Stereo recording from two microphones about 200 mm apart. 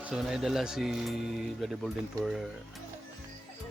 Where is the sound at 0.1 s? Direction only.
Centre (ahead or behind).